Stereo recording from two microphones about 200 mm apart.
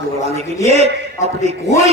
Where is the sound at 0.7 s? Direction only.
30° right (ahead or behind).